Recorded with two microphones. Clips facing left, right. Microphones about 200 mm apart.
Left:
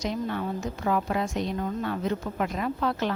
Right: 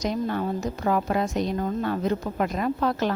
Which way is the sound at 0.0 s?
40° right (ahead or behind).